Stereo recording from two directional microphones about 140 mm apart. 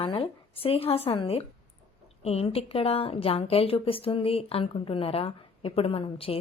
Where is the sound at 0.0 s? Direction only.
40° left (ahead or behind).